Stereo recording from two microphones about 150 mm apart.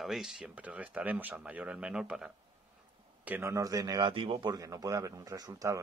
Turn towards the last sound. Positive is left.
turn(degrees=-20)  # may be behind; listen again after turning